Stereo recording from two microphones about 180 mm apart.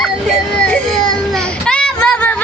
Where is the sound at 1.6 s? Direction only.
5° left (ahead or behind).